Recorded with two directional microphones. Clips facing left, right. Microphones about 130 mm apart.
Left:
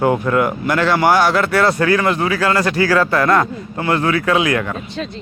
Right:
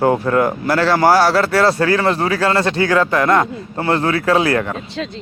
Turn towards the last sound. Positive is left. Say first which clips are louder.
# right 1 dB
turn(degrees=-35)  # may be behind; listen again after turning